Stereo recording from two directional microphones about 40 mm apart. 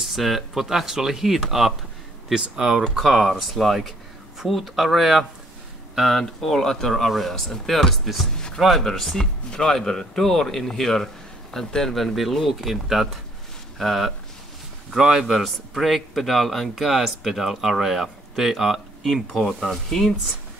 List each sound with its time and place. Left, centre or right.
0.0 s speech: centre
3.1 s speech: centre
11.9 s speech: centre
15.0 s speech: centre
15.2 s speech: centre